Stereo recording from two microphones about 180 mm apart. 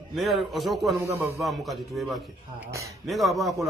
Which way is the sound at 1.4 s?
Centre (ahead or behind).